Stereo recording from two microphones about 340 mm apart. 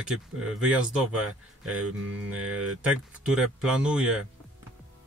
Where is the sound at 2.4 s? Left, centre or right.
Right.